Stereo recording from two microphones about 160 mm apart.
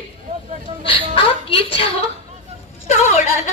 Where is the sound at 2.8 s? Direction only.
45° left (ahead or behind).